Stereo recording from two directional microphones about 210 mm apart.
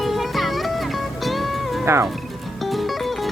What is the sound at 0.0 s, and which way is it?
Music, centre (ahead or behind).